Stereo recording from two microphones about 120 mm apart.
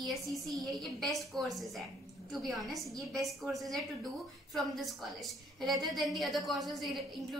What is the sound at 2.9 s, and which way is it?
Speech, 30° right (ahead or behind).